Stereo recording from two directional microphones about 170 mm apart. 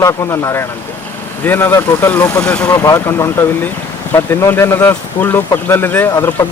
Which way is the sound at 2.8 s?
20° left (ahead or behind).